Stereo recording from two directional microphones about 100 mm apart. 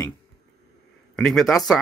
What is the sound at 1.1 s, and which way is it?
Speech, 5° left (ahead or behind).